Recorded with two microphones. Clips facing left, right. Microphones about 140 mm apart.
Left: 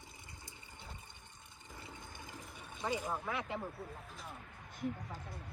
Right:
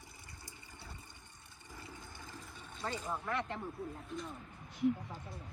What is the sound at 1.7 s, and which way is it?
Water, 20° left (ahead or behind).